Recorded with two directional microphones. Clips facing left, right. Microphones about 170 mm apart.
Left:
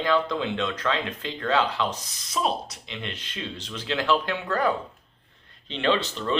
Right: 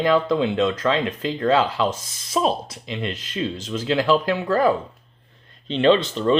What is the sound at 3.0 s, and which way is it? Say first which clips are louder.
Speech: right 9 dB; 40° right (ahead or behind).